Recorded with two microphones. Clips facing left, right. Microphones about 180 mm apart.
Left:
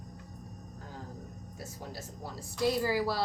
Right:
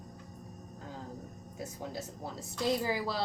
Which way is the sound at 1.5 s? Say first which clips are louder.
Right 4 dB; 20° right (ahead or behind).